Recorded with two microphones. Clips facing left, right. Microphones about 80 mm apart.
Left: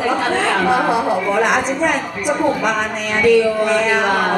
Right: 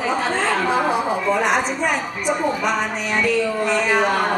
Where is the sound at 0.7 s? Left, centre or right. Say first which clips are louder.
Left 4 dB; centre.